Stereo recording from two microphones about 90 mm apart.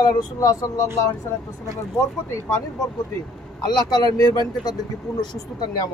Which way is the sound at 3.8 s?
50° left (ahead or behind).